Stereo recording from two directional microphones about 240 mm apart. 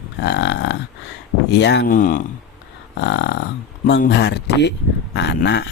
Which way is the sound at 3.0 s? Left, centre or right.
Left.